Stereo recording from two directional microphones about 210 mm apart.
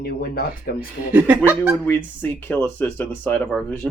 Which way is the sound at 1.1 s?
5° right (ahead or behind).